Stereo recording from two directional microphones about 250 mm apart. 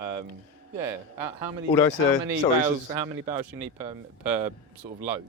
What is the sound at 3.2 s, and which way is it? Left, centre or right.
Speech, centre.